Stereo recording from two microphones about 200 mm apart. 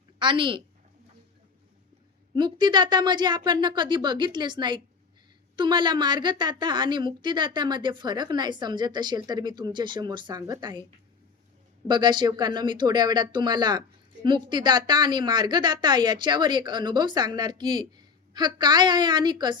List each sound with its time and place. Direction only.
0.2 s speech: 25° right (ahead or behind)
2.3 s speech: 20° right (ahead or behind)
11.9 s speech: 20° right (ahead or behind)